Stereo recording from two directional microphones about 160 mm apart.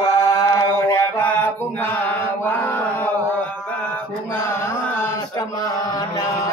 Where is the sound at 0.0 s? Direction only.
20° left (ahead or behind).